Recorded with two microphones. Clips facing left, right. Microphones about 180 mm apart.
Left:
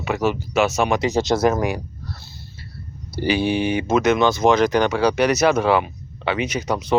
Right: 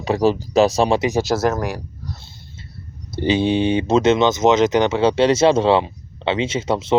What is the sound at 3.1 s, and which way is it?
Speech, 20° right (ahead or behind).